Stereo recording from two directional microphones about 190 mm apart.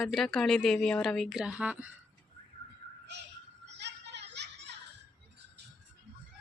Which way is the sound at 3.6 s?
65° right (ahead or behind).